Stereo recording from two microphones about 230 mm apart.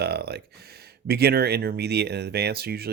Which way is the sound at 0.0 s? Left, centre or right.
Right.